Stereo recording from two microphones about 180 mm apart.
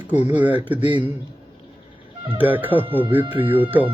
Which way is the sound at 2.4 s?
10° right (ahead or behind).